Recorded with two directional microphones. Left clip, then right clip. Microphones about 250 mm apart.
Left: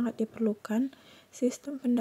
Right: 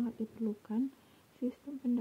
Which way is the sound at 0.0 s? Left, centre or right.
Left.